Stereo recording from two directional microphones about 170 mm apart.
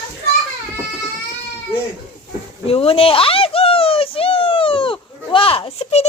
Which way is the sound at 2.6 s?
35° left (ahead or behind).